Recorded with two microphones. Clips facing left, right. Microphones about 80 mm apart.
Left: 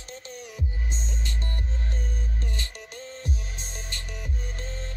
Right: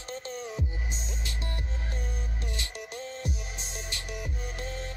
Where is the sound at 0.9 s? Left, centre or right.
Centre.